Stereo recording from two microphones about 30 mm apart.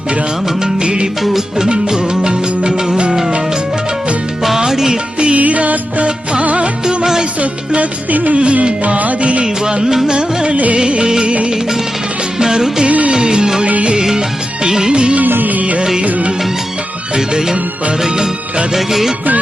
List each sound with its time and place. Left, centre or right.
0.6 s music: right
4.5 s music: centre
5.4 s music: right
6.8 s music: right
7.8 s music: right
9.4 s music: right
12.4 s music: right
15.2 s music: right
17.2 s music: right
18.7 s music: centre